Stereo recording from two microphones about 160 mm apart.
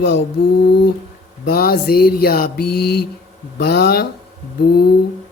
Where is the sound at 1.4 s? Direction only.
70° left (ahead or behind); by 3.0 s 90° left.